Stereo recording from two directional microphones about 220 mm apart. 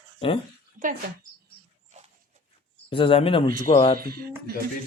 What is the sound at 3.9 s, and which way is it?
Speech, 45° right (ahead or behind).